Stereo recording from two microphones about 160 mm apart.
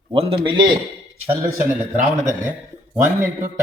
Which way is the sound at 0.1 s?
35° right (ahead or behind).